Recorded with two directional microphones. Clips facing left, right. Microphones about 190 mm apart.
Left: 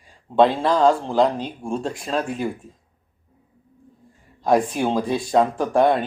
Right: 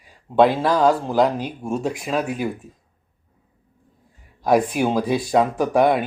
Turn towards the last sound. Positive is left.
turn(degrees=-10)  # may be behind; listen again after turning